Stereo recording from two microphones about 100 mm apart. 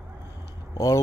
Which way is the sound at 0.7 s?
30° left (ahead or behind).